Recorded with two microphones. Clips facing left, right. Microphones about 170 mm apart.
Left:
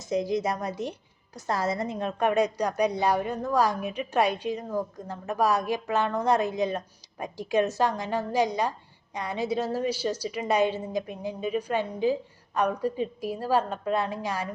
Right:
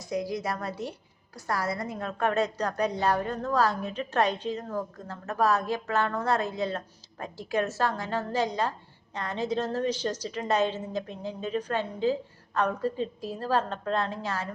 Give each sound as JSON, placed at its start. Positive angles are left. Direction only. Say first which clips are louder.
{"t": 0.0, "sound": "a woman's voice", "louder": "left 4 dB", "side_deg": 20}